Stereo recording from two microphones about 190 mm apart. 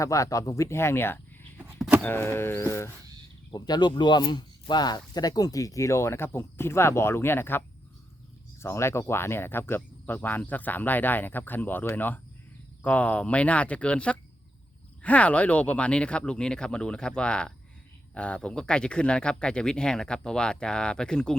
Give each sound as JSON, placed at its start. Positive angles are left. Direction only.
{"t": 0.0, "sound": "speech", "side_deg": 15}
{"t": 1.8, "sound": "power windows", "side_deg": 0}
{"t": 2.0, "sound": "speech", "side_deg": 10}
{"t": 8.6, "sound": "speech", "side_deg": 15}